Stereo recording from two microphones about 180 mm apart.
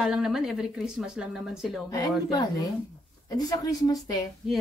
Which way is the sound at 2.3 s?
20° left (ahead or behind).